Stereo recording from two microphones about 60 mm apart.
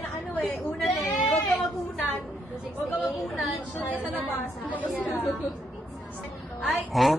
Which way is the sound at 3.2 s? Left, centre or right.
Centre.